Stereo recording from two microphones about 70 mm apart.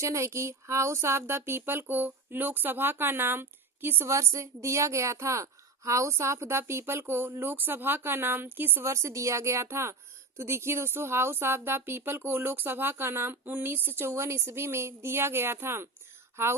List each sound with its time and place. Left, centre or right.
0.0 s a woman's voice: right
4.1 s a woman's voice: right
8.8 s a woman's voice: right